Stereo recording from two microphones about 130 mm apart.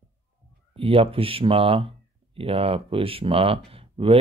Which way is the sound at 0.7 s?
45° right (ahead or behind).